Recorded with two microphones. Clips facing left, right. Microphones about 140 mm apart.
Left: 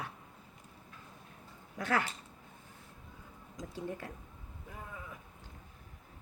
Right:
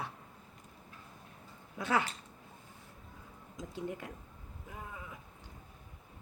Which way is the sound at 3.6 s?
15° right (ahead or behind).